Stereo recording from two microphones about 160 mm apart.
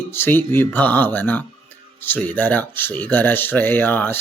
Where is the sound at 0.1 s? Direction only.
15° left (ahead or behind).